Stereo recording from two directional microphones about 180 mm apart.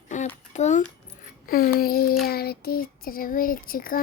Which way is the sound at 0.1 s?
45° left (ahead or behind).